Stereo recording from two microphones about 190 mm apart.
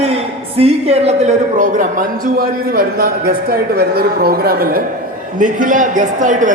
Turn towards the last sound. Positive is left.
turn(degrees=-40)  # may be behind; listen again after turning